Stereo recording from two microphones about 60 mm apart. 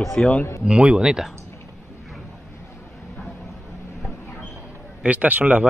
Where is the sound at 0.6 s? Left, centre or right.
Centre.